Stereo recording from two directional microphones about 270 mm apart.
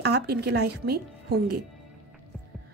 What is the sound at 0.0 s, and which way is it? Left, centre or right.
A woman's voice, right.